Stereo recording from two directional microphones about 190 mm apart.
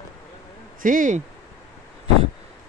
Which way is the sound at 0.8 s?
45° right (ahead or behind).